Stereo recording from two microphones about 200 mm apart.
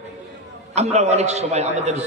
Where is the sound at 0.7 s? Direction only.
35° right (ahead or behind).